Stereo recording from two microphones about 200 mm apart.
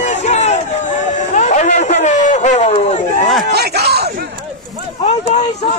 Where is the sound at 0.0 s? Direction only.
35° left (ahead or behind).